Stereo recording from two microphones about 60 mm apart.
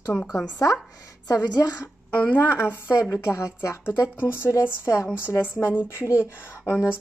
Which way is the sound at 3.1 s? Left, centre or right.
Left.